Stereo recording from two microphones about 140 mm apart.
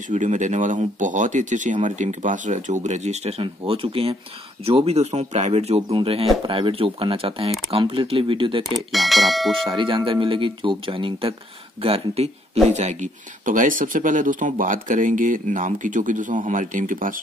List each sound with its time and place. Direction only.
0.1 s speech: 60° right (ahead or behind); by 8.6 s 35° right (ahead or behind)
8.6 s speech: centre (ahead or behind)
9.7 s speech: 35° right (ahead or behind); by 17.2 s 70° right (ahead or behind)